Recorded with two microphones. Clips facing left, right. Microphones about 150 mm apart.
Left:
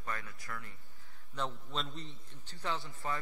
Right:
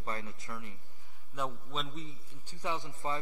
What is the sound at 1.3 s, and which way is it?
A man's voice, 10° right (ahead or behind).